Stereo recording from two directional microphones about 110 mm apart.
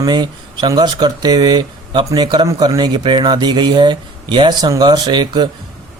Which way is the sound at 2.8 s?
45° right (ahead or behind).